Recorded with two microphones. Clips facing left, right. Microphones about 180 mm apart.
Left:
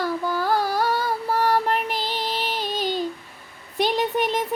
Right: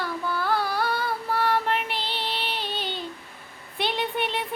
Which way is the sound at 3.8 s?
40° left (ahead or behind).